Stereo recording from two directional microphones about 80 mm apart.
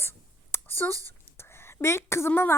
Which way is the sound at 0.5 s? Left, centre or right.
Left.